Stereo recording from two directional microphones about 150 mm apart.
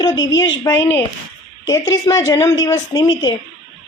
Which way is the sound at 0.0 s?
25° left (ahead or behind).